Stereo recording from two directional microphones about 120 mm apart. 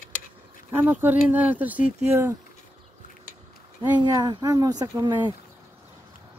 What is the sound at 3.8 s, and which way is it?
Speech, 40° right (ahead or behind).